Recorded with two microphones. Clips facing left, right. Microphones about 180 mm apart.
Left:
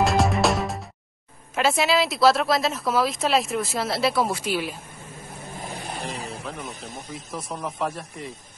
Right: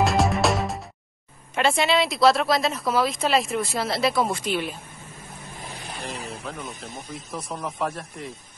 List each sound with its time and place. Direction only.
0.0 s music: centre (ahead or behind)
1.5 s a woman's voice: centre (ahead or behind)
5.8 s vehicle: 35° left (ahead or behind)
6.4 s a woman's voice: centre (ahead or behind)